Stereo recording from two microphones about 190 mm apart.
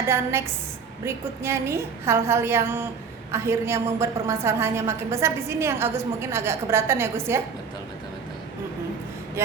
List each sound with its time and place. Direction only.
0.1 s a woman's voice: 15° right (ahead or behind)